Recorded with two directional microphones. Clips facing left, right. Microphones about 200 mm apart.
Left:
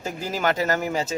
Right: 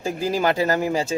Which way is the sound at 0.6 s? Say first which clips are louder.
Right 3 dB; 35° right (ahead or behind).